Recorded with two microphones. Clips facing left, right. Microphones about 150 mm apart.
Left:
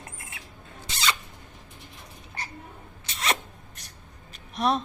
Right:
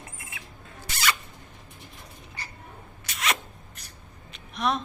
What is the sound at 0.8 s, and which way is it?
Zipper, 20° left (ahead or behind).